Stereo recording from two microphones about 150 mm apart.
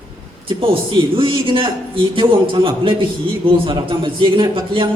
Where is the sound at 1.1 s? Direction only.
35° right (ahead or behind).